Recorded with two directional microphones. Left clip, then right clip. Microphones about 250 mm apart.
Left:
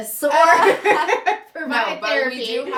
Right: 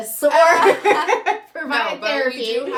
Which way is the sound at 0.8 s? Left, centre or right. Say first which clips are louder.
Even; centre.